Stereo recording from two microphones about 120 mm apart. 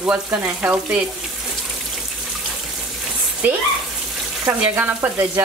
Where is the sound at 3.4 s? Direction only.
15° right (ahead or behind).